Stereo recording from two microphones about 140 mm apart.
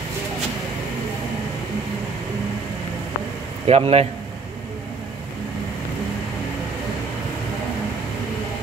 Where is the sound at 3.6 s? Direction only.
45° right (ahead or behind).